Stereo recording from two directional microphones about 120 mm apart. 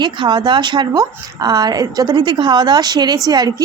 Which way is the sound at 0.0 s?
40° right (ahead or behind).